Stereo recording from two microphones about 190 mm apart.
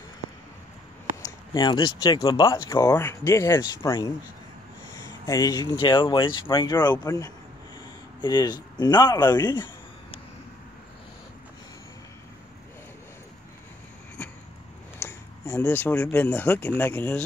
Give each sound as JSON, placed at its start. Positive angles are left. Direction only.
{"t": 1.2, "sound": "speech", "side_deg": 20}
{"t": 15.0, "sound": "speech", "side_deg": 15}